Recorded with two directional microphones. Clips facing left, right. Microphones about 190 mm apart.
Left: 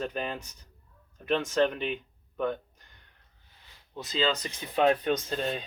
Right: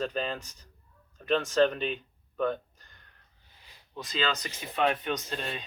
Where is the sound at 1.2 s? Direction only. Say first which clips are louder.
Right 1 dB; 10° left (ahead or behind).